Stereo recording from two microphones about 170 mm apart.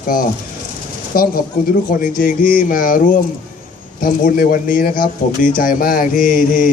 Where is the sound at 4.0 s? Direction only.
55° left (ahead or behind).